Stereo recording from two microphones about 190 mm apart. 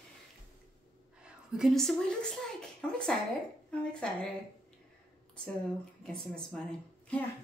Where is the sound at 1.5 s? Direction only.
Centre (ahead or behind).